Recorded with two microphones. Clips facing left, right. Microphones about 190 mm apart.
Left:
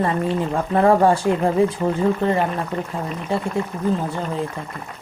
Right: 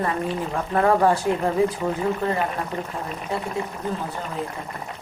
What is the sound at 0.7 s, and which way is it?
Speech, 30° left (ahead or behind).